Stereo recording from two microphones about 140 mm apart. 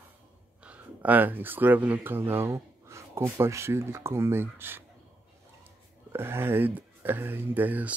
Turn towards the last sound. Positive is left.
turn(degrees=-10)  # may be behind; listen again after turning